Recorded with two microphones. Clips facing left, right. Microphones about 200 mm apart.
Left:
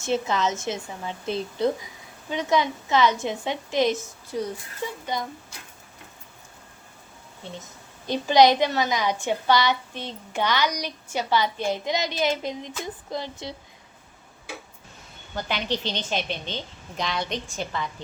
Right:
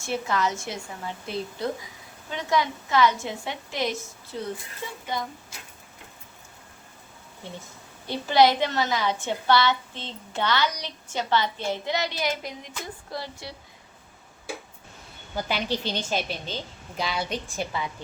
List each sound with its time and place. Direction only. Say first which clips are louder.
0.0 s a woman's voice: left 2 dB; 20° left (ahead or behind)
8.0 s a woman's voice: left 2 dB; 15° left (ahead or behind)
15.4 s a woman's voice: even; 10° right (ahead or behind)